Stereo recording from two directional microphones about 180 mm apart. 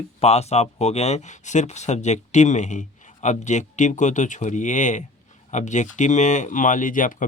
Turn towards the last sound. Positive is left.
turn(degrees=45)  # may be behind; listen again after turning